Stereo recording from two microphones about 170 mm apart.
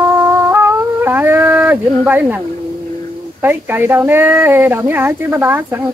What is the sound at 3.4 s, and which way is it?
Speech, 10° right (ahead or behind).